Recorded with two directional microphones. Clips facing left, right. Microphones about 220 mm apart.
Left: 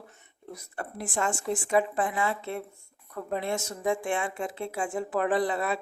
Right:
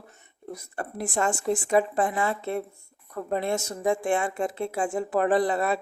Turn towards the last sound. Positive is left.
turn(degrees=-45)  # may be behind; listen again after turning